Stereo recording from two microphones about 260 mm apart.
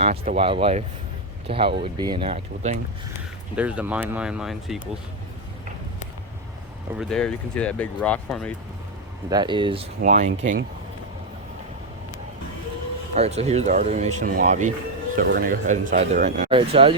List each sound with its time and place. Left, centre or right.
0.0 s speech: right
3.5 s speech: centre
7.0 s speech: centre
9.3 s speech: centre
10.0 s speech: right
13.1 s speech: right